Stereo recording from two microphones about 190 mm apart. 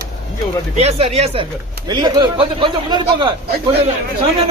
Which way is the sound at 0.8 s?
35° right (ahead or behind).